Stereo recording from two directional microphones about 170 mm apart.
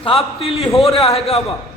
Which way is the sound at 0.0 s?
35° left (ahead or behind).